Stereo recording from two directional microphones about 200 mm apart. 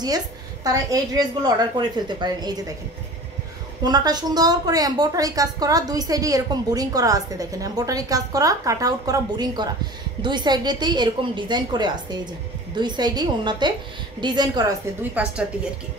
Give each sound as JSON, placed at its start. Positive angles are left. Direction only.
{"t": 0.7, "sound": "a woman's voice", "side_deg": -15}
{"t": 3.8, "sound": "a woman's voice", "side_deg": -20}
{"t": 15.2, "sound": "a woman's voice", "side_deg": -5}